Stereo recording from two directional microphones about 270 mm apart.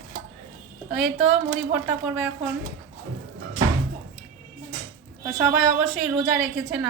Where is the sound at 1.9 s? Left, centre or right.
Centre.